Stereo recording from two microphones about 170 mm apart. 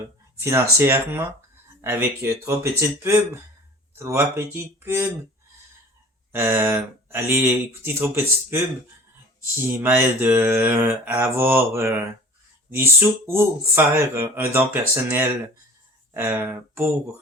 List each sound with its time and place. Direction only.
0.3 s speech: 15° right (ahead or behind)
6.3 s speech: 15° right (ahead or behind)